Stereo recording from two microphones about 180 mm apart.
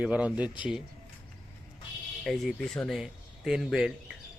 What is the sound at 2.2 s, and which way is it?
Speech, centre (ahead or behind).